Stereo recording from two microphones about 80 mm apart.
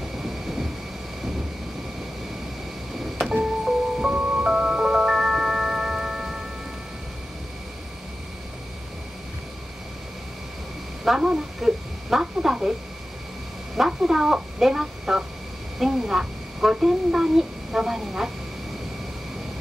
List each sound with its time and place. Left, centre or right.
3.2 s music: centre
11.1 s speech: centre
13.7 s a woman's voice: centre